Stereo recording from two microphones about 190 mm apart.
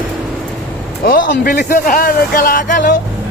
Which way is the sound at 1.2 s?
65° left (ahead or behind).